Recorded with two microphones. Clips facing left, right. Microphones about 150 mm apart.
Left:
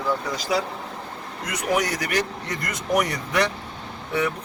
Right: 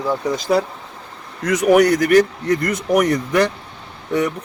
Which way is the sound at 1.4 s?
75° right (ahead or behind).